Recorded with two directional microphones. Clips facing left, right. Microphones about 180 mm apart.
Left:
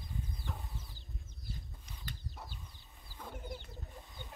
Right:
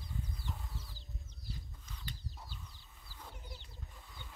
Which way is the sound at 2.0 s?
55° left (ahead or behind).